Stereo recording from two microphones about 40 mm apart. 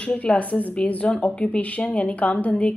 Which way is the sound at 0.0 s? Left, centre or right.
Left.